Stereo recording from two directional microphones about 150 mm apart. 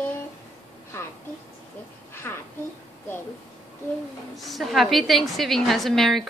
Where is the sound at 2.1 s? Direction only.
15° left (ahead or behind).